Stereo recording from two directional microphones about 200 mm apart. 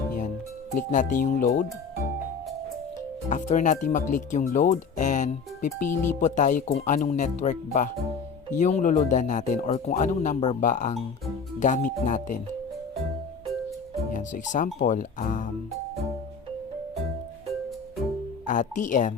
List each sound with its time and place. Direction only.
0.9 s speech: 40° left (ahead or behind)
3.2 s speech: 40° left (ahead or behind)
14.1 s speech: 40° left (ahead or behind)
18.4 s speech: 40° left (ahead or behind)